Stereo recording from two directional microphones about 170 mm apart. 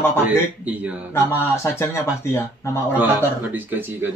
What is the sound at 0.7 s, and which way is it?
Speech, 10° right (ahead or behind).